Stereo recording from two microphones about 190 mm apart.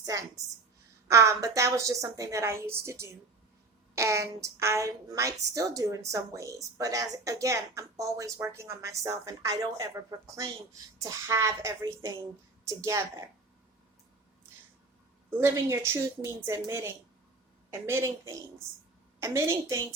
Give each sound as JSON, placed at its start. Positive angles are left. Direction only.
{"t": 0.0, "sound": "a woman's voice", "side_deg": -20}
{"t": 15.3, "sound": "a woman's voice", "side_deg": -15}